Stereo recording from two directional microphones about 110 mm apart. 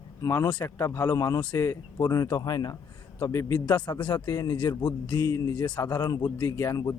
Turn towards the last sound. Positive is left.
turn(degrees=30)  # may be behind; listen again after turning